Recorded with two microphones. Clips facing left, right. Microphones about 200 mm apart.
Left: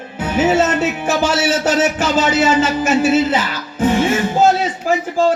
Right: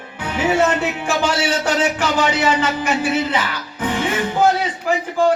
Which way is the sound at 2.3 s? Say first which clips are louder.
Left 4 dB; 25° left (ahead or behind).